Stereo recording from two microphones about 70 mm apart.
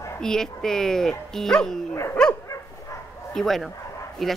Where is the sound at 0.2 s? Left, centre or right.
Centre.